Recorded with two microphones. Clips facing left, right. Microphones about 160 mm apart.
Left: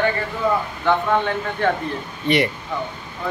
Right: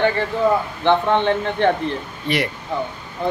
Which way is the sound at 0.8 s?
25° right (ahead or behind).